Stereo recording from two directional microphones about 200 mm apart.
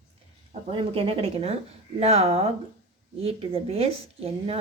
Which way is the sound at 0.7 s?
25° right (ahead or behind).